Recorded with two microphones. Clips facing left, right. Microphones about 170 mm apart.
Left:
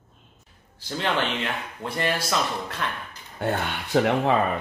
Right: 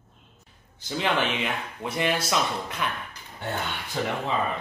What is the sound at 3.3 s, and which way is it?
Speech, 60° left (ahead or behind).